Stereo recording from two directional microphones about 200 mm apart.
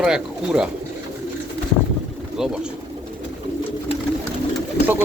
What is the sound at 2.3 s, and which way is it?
Speech, 5° right (ahead or behind).